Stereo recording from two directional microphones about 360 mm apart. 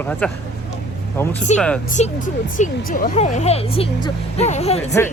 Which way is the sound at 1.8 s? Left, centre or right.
Left.